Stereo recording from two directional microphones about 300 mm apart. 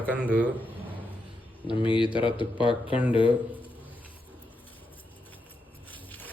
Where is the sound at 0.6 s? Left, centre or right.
Centre.